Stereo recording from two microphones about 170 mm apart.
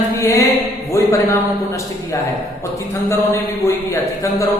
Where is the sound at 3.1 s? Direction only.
15° left (ahead or behind).